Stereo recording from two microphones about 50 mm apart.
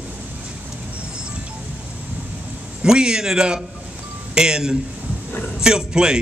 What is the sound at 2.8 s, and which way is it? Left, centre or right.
A man's voice, centre.